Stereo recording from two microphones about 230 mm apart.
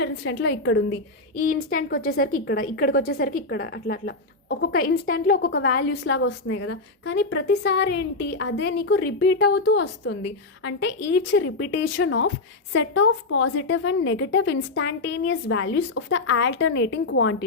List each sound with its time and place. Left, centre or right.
0.0 s a woman's voice: left
2.0 s a woman's voice: left